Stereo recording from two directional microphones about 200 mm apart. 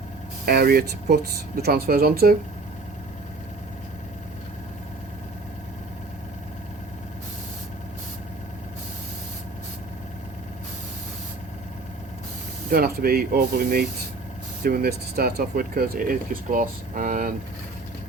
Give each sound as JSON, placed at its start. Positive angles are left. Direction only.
{"t": 0.4, "sound": "speech", "side_deg": -50}
{"t": 12.7, "sound": "speech", "side_deg": -50}